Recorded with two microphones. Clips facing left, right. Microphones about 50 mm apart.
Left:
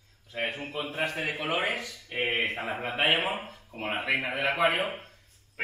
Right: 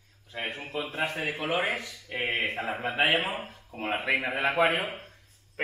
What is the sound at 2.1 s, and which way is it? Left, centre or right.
A man's voice, centre.